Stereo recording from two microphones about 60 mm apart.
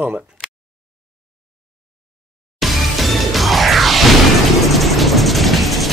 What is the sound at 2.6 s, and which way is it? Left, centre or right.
Music, centre.